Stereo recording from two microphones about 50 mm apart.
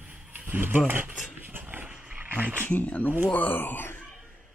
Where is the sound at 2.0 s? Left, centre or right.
Right.